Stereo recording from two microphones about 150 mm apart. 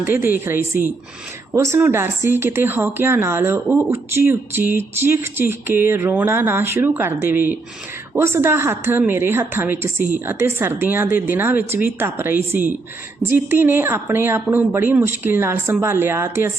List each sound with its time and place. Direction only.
0.0 s speech: 15° right (ahead or behind)